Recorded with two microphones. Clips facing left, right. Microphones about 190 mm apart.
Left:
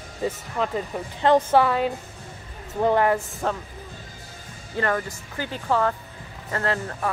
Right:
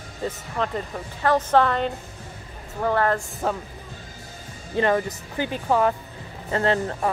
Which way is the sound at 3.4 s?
5° right (ahead or behind).